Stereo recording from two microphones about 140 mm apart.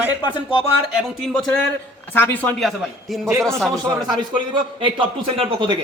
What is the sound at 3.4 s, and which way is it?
Speech, centre (ahead or behind).